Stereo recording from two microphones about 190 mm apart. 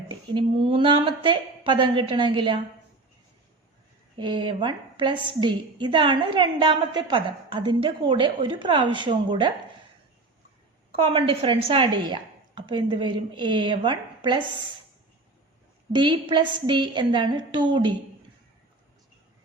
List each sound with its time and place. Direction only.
0.1 s a woman's voice: 25° right (ahead or behind)
4.2 s a woman's voice: 25° right (ahead or behind)
10.9 s a woman's voice: 30° right (ahead or behind)
16.0 s a woman's voice: 25° right (ahead or behind)